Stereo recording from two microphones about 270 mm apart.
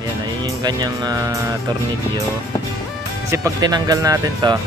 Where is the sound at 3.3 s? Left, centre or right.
Centre.